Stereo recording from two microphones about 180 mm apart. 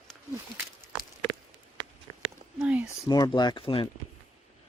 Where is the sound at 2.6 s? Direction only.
5° right (ahead or behind).